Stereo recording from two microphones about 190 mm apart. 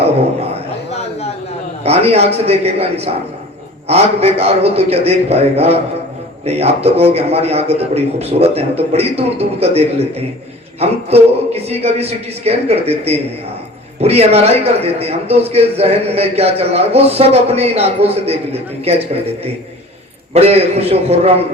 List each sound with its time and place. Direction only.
1.8 s a man's voice: 30° right (ahead or behind)
20.3 s a man's voice: 30° right (ahead or behind)